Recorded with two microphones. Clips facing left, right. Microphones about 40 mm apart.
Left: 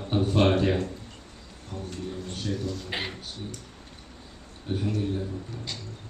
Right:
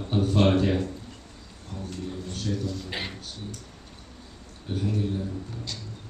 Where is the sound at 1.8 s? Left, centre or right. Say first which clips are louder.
Right 1 dB; centre.